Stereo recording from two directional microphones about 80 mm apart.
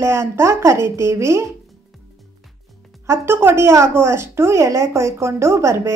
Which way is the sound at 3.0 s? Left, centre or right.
Right.